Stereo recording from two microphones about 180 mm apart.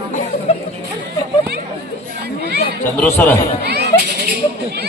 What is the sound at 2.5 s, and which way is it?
Chatter, 65° right (ahead or behind).